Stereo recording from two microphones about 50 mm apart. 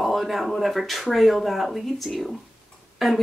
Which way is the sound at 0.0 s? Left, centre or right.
Centre.